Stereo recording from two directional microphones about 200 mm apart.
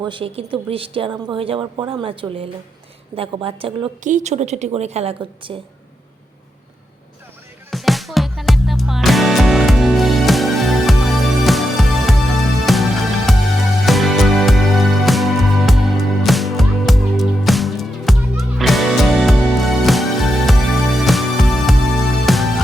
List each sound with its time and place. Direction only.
0.0 s a woman's voice: 25° right (ahead or behind)
7.7 s music: centre (ahead or behind)